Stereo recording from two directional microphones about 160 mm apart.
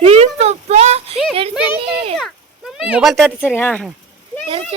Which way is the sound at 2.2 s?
5° right (ahead or behind).